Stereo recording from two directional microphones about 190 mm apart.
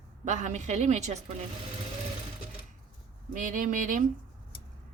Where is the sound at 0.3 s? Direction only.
40° right (ahead or behind).